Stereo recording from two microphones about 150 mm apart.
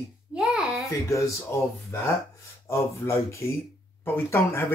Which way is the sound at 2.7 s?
20° left (ahead or behind).